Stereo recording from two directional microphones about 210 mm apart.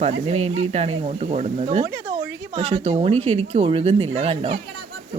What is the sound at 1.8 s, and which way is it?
Speech, 15° right (ahead or behind).